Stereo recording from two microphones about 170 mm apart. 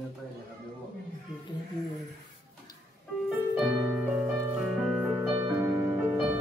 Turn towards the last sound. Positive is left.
turn(degrees=-15)  # may be behind; listen again after turning